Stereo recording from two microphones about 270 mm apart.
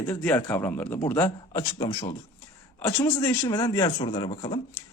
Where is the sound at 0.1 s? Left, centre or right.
Centre.